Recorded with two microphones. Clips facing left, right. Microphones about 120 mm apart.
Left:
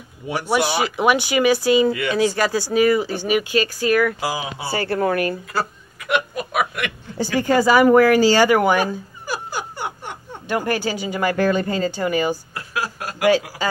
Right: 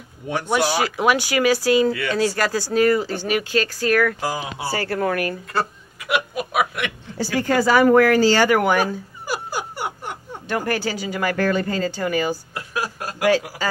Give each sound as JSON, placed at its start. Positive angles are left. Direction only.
{"t": 0.3, "sound": "speech", "side_deg": 10}
{"t": 4.6, "sound": "speech", "side_deg": 25}
{"t": 5.5, "sound": "snicker", "side_deg": 0}
{"t": 7.3, "sound": "speech", "side_deg": 15}
{"t": 9.6, "sound": "a sound", "side_deg": -5}
{"t": 10.5, "sound": "speech", "side_deg": 15}